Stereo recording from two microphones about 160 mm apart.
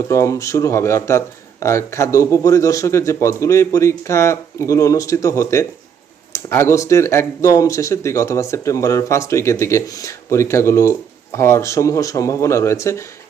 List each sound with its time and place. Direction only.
0.1 s speech: 20° left (ahead or behind)